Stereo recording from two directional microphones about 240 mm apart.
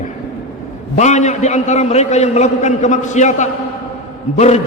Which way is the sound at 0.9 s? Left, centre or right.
Left.